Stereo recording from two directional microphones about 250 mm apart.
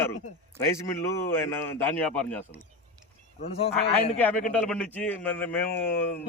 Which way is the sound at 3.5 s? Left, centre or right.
Left.